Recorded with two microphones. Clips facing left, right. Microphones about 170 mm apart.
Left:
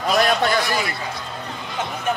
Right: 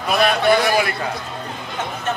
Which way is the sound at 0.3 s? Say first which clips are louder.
Right 4 dB; 60° right (ahead or behind).